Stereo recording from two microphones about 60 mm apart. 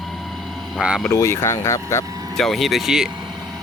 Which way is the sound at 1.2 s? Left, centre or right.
Left.